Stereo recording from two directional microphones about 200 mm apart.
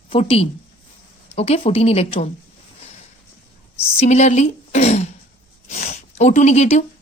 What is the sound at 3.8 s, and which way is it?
A woman's voice, 30° left (ahead or behind).